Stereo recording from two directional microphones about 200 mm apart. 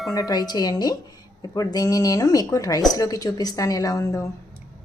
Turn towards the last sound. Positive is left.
turn(degrees=15)  # may be behind; listen again after turning